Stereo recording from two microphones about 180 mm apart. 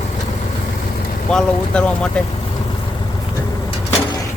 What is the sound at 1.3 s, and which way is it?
Speech, 5° left (ahead or behind).